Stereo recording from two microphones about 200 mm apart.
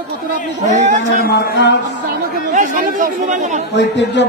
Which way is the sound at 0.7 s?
35° right (ahead or behind).